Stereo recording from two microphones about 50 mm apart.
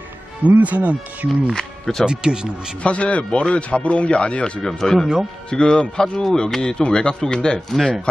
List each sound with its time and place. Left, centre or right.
0.4 s speech: right
1.3 s speech: centre
2.0 s speech: centre
2.8 s speech: left
4.6 s speech: centre
7.7 s speech: centre